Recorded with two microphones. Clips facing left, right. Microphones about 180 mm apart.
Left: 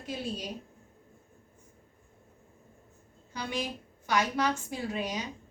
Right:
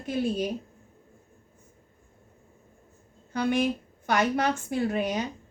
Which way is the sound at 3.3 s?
55° right (ahead or behind).